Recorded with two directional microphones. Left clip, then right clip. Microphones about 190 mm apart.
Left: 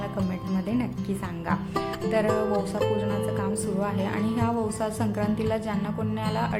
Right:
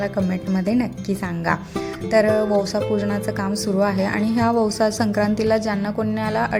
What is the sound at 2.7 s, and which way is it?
Speech, 30° right (ahead or behind).